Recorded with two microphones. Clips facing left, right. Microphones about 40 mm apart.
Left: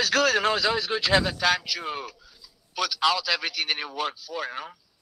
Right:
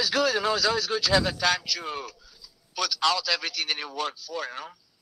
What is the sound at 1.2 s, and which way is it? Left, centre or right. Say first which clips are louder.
A man's voice: left 1 dB; centre.